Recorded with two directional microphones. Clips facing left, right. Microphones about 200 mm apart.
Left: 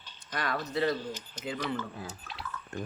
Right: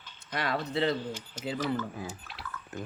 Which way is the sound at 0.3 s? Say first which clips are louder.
Right 1 dB; 25° right (ahead or behind).